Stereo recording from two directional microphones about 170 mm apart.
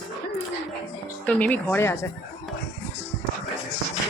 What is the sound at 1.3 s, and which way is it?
Speech, 5° left (ahead or behind).